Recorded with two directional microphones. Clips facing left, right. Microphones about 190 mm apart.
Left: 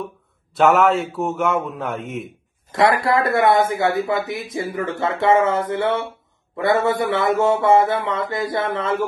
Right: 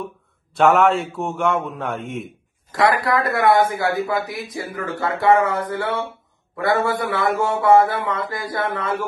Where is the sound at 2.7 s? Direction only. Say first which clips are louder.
Left 1 dB; 25° left (ahead or behind).